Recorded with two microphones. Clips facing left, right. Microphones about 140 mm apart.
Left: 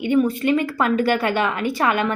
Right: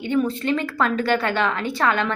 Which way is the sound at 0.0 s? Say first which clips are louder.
Left 4 dB; 10° left (ahead or behind).